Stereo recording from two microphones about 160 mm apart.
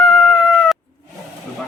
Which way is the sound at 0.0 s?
Centre (ahead or behind).